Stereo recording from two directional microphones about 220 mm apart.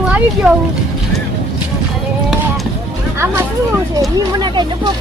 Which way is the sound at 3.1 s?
10° right (ahead or behind).